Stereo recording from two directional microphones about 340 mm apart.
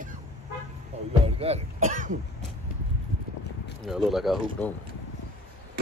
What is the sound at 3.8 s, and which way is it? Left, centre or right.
Speech, centre.